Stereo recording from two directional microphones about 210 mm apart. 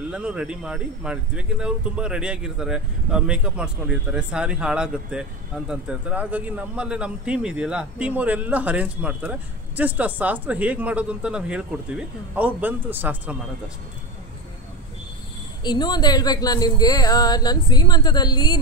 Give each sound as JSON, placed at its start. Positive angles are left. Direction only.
{"t": 0.1, "sound": "speech", "side_deg": -5}
{"t": 15.6, "sound": "speech", "side_deg": 20}